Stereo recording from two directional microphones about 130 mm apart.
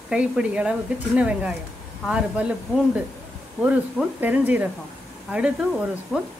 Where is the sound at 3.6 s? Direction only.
10° right (ahead or behind).